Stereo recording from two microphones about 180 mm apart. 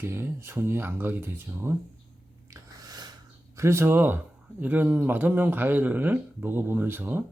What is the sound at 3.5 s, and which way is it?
Speech, 15° right (ahead or behind).